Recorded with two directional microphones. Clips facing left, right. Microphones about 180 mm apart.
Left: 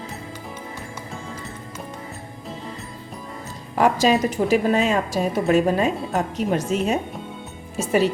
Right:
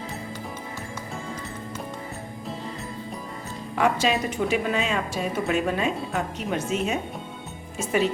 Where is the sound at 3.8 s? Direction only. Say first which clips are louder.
Left 5 dB; 40° left (ahead or behind).